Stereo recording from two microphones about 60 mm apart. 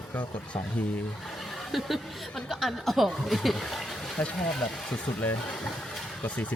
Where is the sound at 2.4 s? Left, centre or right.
Centre.